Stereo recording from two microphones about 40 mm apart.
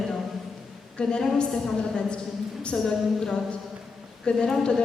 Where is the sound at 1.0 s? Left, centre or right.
Left.